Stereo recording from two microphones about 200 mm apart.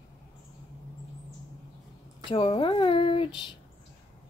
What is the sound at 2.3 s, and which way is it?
Speech, 30° left (ahead or behind).